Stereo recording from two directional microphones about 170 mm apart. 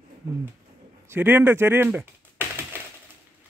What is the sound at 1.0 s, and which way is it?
Speech, 10° right (ahead or behind).